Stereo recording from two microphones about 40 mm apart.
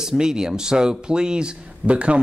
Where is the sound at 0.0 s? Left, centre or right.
Centre.